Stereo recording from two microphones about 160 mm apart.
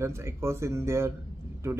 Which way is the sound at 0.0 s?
15° right (ahead or behind).